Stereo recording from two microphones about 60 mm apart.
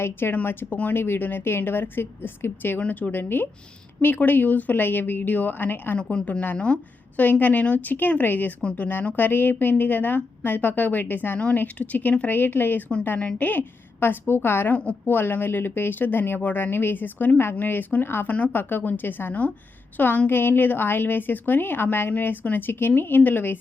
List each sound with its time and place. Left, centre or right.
0.0 s speech: left
6.1 s a woman's voice: centre; by 12.8 s left
13.1 s a woman's voice: centre
13.5 s speech: left